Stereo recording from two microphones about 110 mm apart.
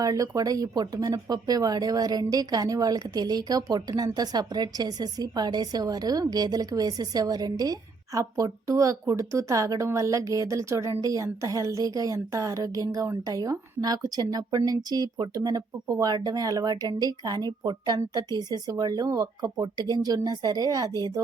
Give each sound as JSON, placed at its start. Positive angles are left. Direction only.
{"t": 0.0, "sound": "speech", "side_deg": -35}